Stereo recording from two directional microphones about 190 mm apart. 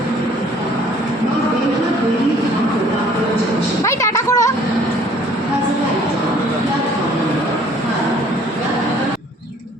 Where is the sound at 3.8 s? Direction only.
15° left (ahead or behind).